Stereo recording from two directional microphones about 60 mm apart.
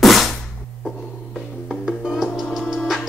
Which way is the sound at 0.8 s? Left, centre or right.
Centre.